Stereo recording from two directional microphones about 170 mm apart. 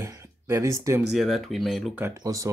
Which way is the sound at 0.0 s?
15° right (ahead or behind).